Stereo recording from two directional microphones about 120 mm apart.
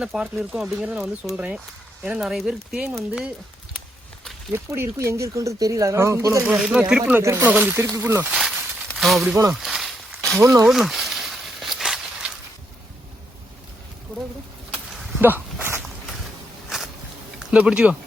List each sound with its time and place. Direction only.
0.0 s speech: 5° right (ahead or behind)
4.5 s speech: 20° right (ahead or behind)
6.4 s speech: 5° right (ahead or behind)
7.0 s speech: 20° right (ahead or behind)
8.3 s a sound: centre (ahead or behind)
9.0 s speech: centre (ahead or behind)
9.5 s a sound: centre (ahead or behind)
10.4 s speech: 25° right (ahead or behind)
10.7 s snake: 5° right (ahead or behind)
15.2 s walk: 15° right (ahead or behind)
17.4 s speech: 10° right (ahead or behind)